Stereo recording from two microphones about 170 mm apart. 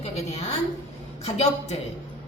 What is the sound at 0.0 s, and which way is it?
A woman's voice, 40° left (ahead or behind).